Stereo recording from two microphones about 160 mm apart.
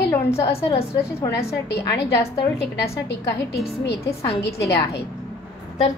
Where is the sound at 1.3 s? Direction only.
90° left.